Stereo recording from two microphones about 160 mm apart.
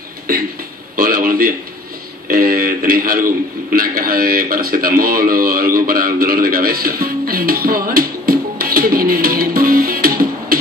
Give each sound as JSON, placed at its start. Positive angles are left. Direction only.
{"t": 0.9, "sound": "a man's voice", "side_deg": -65}